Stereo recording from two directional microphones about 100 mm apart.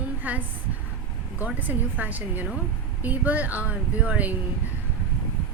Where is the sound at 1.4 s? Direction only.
15° right (ahead or behind).